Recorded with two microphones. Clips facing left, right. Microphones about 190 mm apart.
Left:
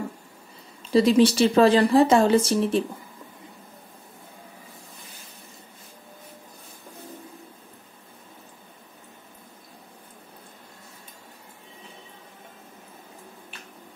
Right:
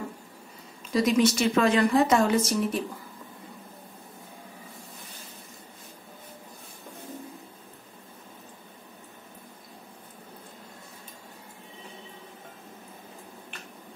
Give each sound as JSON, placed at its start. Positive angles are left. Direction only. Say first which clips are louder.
{"t": 0.9, "sound": "speech", "louder": "left 5 dB", "side_deg": 30}